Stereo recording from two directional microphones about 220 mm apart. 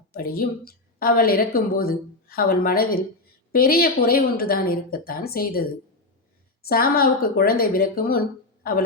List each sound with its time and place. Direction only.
0.1 s a woman's voice: 40° left (ahead or behind)
6.7 s a woman's voice: 45° left (ahead or behind)